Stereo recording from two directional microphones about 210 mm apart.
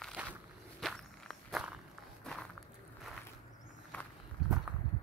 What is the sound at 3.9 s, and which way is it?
Walk, 10° left (ahead or behind).